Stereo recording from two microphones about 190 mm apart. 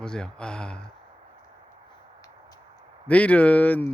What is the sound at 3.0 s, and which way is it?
Speech, 5° left (ahead or behind).